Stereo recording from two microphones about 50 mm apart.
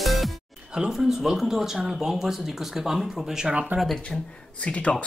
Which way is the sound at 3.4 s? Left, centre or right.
Centre.